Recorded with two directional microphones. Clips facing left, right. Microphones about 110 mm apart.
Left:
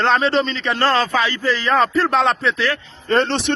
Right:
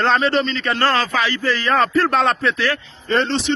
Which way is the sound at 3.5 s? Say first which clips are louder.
Right 2 dB; 55° left (ahead or behind).